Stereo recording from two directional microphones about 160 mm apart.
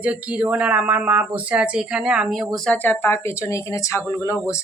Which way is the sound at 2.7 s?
10° left (ahead or behind).